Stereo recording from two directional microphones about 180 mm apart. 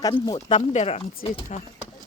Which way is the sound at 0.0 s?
20° left (ahead or behind).